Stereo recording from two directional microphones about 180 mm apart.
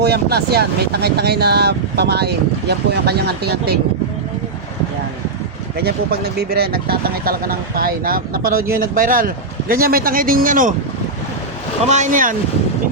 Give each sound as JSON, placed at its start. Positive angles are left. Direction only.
{"t": 0.0, "sound": "speech", "side_deg": -65}
{"t": 5.7, "sound": "speech", "side_deg": -60}
{"t": 11.9, "sound": "speech", "side_deg": -45}